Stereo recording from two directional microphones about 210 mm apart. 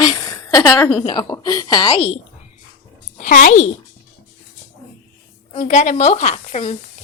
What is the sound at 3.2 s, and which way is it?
Speech, 40° left (ahead or behind).